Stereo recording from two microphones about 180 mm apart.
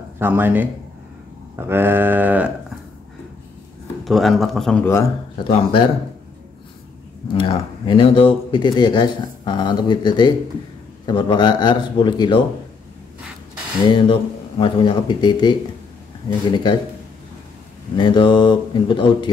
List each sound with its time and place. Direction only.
0.2 s a sound: 10° right (ahead or behind)
4.0 s speech: centre (ahead or behind)
5.4 s speech: 30° left (ahead or behind)
7.3 s speech: 25° left (ahead or behind)
13.8 s speech: 25° left (ahead or behind)
17.9 s speech: 25° left (ahead or behind)